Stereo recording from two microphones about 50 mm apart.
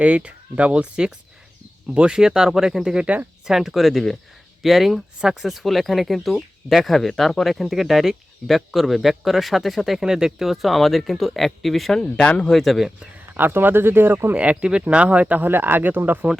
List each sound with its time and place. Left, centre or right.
0.0 s speech: right; by 2.8 s centre
2.8 s speech: centre
3.4 s speech: centre
10.0 s speech: centre
13.3 s speech: right
14.3 s speech: right